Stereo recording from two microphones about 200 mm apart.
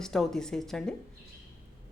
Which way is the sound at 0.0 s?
Centre (ahead or behind).